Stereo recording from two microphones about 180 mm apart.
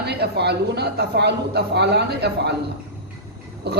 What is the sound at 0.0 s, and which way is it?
Speech, 65° right (ahead or behind).